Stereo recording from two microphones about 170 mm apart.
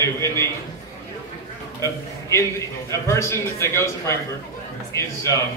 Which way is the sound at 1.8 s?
15° left (ahead or behind).